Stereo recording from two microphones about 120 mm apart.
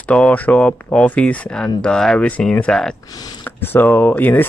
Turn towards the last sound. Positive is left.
turn(degrees=15)  # may be behind; listen again after turning